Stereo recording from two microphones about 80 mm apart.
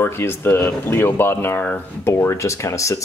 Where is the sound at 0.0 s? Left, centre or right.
Left.